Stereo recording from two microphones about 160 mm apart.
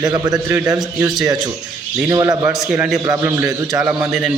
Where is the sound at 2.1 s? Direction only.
20° right (ahead or behind).